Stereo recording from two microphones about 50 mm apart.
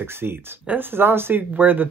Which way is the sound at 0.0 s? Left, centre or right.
Right.